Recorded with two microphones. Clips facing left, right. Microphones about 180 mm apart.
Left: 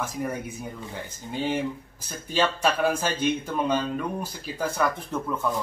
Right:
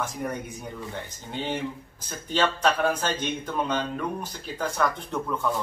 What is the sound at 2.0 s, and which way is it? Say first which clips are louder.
Speech: even; 10° left (ahead or behind).